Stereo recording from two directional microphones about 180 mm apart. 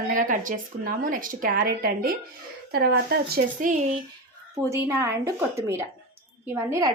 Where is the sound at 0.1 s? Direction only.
45° right (ahead or behind).